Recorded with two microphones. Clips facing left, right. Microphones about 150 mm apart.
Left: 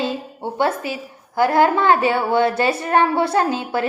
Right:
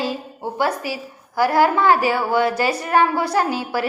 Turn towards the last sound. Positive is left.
turn(degrees=25)  # may be behind; listen again after turning